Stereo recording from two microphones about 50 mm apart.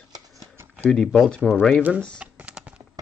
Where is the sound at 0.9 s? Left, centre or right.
Centre.